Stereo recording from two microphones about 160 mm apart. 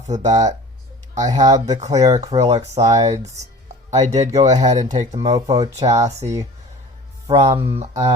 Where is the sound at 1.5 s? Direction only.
45° right (ahead or behind).